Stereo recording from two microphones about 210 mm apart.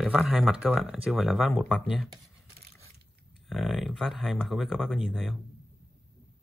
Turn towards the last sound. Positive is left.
turn(degrees=0)  # may be behind; listen again after turning